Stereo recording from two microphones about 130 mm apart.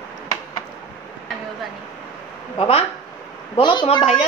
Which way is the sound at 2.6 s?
50° left (ahead or behind).